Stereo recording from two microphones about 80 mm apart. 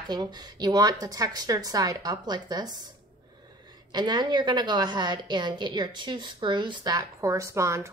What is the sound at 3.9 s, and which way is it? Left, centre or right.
A woman's voice, right.